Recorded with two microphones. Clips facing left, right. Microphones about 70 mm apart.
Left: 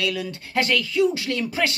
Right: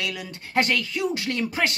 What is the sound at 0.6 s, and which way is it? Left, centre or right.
Speech, right.